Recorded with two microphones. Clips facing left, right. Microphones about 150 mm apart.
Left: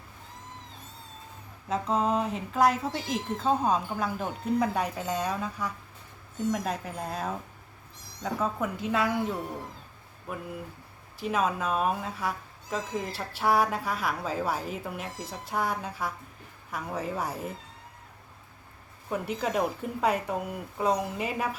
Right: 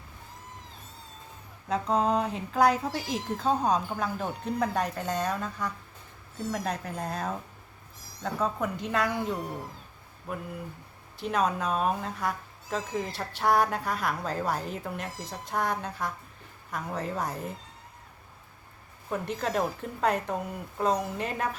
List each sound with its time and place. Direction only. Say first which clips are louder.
1.6 s speech: right 1 dB; centre (ahead or behind)
11.2 s speech: even; 5° left (ahead or behind)
19.0 s speech: left 1 dB; 5° left (ahead or behind)